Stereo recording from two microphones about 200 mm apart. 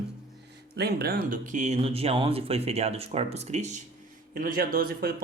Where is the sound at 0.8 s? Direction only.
55° right (ahead or behind).